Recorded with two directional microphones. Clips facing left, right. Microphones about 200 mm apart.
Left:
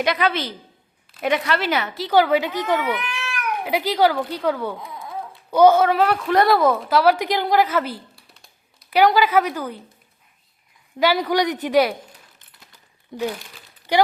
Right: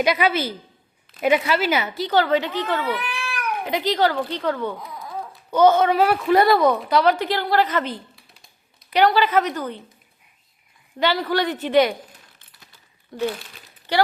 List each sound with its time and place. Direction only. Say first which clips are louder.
0.0 s speech: right 1 dB; 5° right (ahead or behind)
4.9 s a sound: left 1 dB; 25° left (ahead or behind)
5.5 s speech: left 2 dB; 10° left (ahead or behind)
11.0 s speech: left 2 dB; 10° left (ahead or behind)
13.9 s speech: left 2 dB; 10° left (ahead or behind)